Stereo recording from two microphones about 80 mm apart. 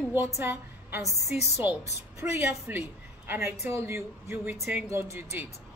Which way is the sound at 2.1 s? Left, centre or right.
Right.